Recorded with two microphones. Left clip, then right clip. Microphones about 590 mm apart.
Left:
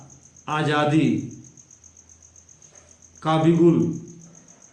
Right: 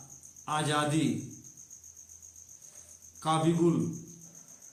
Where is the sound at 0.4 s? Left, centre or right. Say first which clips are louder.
Left 8 dB; right.